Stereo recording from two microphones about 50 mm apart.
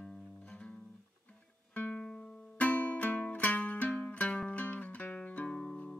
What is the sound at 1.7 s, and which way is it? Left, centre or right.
Music, left.